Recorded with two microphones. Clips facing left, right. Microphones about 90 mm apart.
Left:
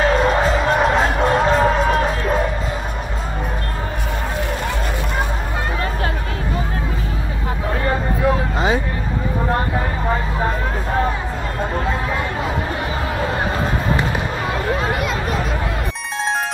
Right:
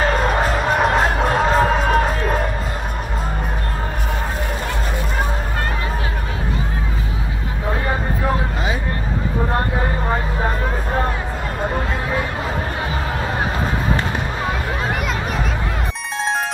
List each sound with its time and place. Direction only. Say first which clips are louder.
0.0 s music: left 2 dB; centre (ahead or behind)